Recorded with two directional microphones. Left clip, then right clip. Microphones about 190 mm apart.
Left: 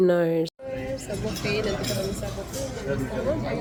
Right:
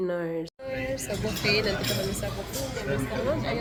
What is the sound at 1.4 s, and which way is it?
Speech, 5° right (ahead or behind).